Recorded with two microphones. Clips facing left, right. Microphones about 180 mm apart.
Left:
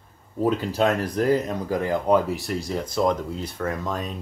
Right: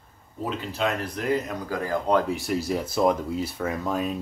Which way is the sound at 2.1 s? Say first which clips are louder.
Left 1 dB; 5° left (ahead or behind).